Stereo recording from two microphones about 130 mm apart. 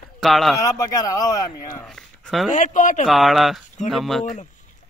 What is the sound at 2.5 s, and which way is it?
Speech, 80° left.